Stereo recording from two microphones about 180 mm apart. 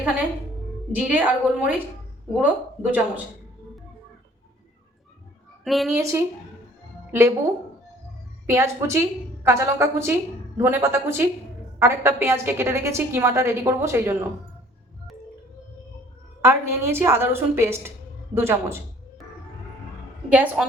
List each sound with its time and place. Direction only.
0.9 s a woman's voice: 10° right (ahead or behind)
5.6 s a woman's voice: centre (ahead or behind)
6.0 s a woman's voice: 15° right (ahead or behind)
8.4 s a woman's voice: 15° right (ahead or behind)
16.4 s a woman's voice: 15° right (ahead or behind)
20.3 s a woman's voice: 10° right (ahead or behind)